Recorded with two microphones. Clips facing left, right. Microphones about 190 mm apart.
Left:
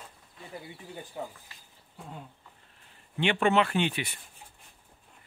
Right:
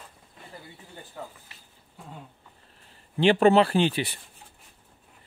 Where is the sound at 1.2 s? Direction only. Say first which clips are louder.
Left 2 dB; 15° left (ahead or behind).